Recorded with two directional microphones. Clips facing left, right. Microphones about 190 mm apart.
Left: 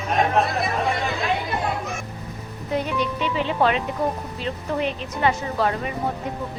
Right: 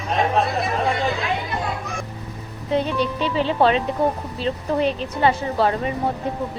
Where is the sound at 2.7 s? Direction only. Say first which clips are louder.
Right 3 dB; 30° right (ahead or behind).